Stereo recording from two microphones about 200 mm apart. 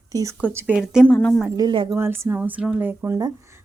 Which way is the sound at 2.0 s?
10° right (ahead or behind).